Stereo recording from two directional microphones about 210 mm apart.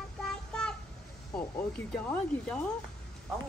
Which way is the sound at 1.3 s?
5° left (ahead or behind).